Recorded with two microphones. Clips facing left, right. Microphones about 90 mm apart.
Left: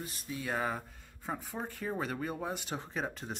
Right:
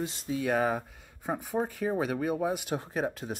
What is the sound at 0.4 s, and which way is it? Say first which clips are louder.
Speech: right 7 dB; 65° right (ahead or behind).